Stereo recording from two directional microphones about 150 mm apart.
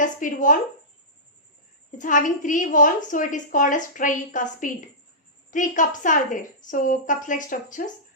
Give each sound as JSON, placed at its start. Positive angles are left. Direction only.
{"t": 0.0, "sound": "a woman's voice", "side_deg": 60}
{"t": 2.0, "sound": "a woman's voice", "side_deg": 60}